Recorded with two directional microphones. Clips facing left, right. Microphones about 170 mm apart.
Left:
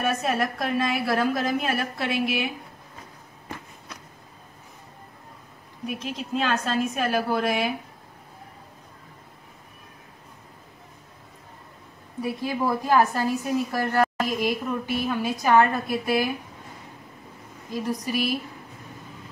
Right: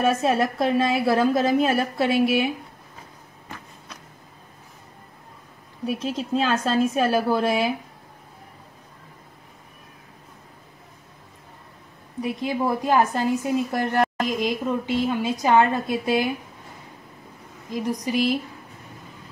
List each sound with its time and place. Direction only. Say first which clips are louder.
0.0 s speech: right 4 dB; 25° right (ahead or behind)
6.0 s a woman's voice: right 3 dB; 35° right (ahead or behind)
12.2 s speech: right 2 dB; 20° right (ahead or behind)
17.8 s a woman's voice: right 4 dB; 15° right (ahead or behind)